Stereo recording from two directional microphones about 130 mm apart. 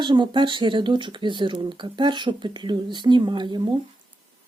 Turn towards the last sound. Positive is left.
turn(degrees=-35)  # may be behind; listen again after turning